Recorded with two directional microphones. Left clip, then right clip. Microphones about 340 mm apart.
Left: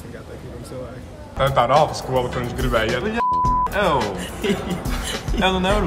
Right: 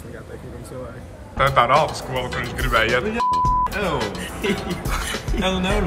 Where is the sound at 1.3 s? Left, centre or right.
Centre.